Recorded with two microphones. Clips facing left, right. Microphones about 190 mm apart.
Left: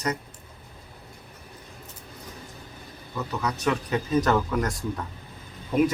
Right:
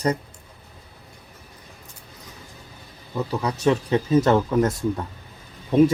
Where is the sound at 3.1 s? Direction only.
30° right (ahead or behind).